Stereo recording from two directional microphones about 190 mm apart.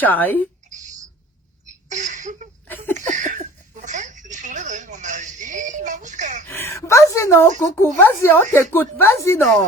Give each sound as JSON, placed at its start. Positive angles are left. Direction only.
{"t": 0.0, "sound": "speech", "side_deg": 10}
{"t": 1.9, "sound": "a sound", "side_deg": -40}
{"t": 6.5, "sound": "speech", "side_deg": 15}